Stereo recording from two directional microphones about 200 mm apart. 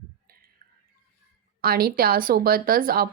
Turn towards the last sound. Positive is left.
turn(degrees=-45)  # may be behind; listen again after turning